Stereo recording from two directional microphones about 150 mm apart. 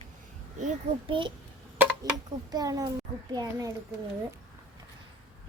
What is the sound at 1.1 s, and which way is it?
Speech, 35° right (ahead or behind).